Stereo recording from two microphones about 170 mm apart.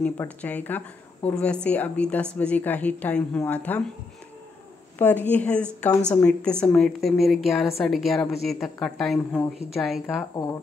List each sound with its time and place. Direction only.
0.0 s speech: 10° left (ahead or behind)
4.9 s a woman's voice: 10° left (ahead or behind)
10.0 s speech: 20° left (ahead or behind)